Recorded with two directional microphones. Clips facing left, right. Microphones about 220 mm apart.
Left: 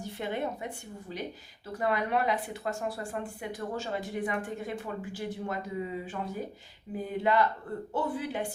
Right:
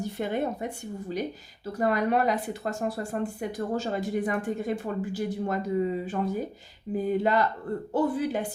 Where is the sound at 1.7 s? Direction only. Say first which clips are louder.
Right 4 dB; 40° right (ahead or behind).